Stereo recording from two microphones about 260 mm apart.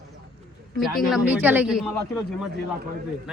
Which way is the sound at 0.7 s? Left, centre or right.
Centre.